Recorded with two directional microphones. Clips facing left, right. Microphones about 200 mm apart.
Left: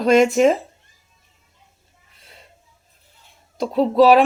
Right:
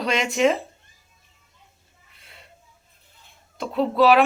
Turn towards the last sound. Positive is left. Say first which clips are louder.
# left 4 dB
turn(degrees=35)  # may be behind; listen again after turning